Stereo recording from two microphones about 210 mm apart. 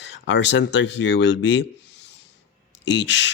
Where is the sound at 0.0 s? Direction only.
60° left (ahead or behind).